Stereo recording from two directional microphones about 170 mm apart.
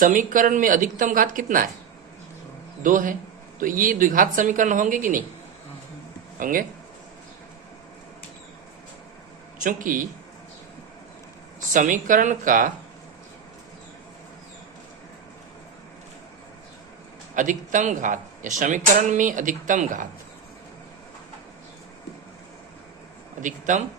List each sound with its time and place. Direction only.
0.0 s speech: 50° right (ahead or behind)
2.8 s speech: 50° right (ahead or behind)
6.4 s speech: 55° right (ahead or behind)
9.6 s speech: 50° right (ahead or behind)
11.7 s speech: 50° right (ahead or behind)
17.3 s speech: 50° right (ahead or behind)
23.4 s speech: 50° right (ahead or behind)